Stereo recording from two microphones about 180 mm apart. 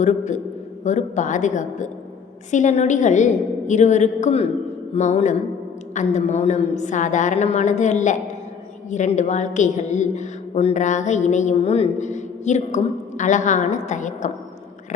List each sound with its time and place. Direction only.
0.0 s a woman's voice: 40° left (ahead or behind)